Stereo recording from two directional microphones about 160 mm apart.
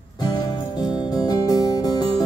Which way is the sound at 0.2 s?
25° left (ahead or behind).